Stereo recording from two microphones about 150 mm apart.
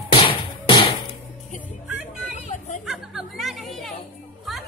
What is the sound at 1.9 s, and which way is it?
Vehicle, 5° right (ahead or behind).